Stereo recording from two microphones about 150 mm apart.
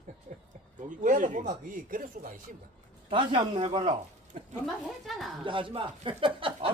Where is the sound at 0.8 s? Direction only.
60° right (ahead or behind).